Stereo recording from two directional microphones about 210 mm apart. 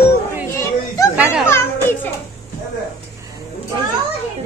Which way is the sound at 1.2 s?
5° right (ahead or behind).